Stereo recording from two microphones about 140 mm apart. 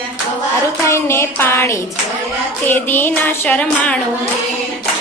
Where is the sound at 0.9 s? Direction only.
20° left (ahead or behind).